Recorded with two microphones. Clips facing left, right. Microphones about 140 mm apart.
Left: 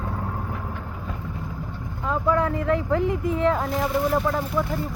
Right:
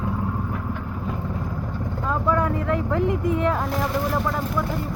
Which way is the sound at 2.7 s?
30° left (ahead or behind).